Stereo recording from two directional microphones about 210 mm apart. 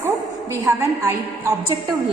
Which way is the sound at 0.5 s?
15° right (ahead or behind).